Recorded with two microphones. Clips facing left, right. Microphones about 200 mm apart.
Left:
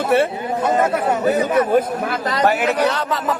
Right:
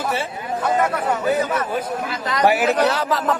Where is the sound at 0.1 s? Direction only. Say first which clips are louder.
Left 10 dB; 60° left (ahead or behind).